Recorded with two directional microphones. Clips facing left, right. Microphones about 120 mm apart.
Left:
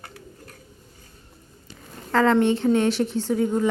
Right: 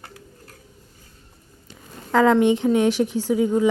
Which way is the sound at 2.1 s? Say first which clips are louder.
Right 2 dB; 15° right (ahead or behind).